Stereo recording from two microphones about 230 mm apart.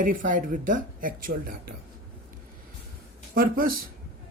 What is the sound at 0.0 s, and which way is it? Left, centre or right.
Speech, right.